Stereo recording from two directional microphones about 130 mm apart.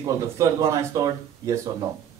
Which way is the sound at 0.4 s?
25° right (ahead or behind).